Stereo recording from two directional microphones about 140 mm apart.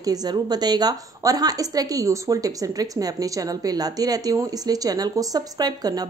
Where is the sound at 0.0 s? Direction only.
30° right (ahead or behind).